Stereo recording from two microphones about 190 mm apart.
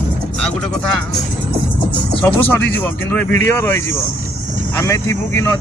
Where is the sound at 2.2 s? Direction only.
10° left (ahead or behind).